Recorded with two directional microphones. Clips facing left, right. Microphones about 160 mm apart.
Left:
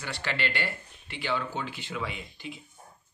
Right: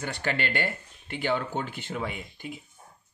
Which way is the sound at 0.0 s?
50° right (ahead or behind).